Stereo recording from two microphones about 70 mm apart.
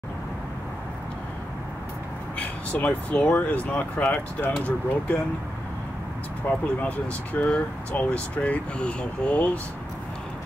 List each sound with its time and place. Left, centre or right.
2.3 s speech: centre
6.5 s speech: left